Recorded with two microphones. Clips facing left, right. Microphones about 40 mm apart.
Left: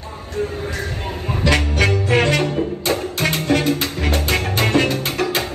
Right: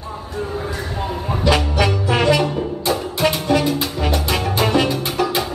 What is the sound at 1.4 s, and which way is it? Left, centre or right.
Music, left.